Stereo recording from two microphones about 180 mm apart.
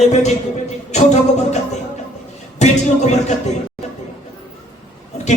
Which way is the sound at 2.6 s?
40° left (ahead or behind).